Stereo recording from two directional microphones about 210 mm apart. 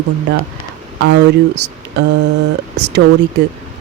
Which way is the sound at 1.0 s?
60° right (ahead or behind).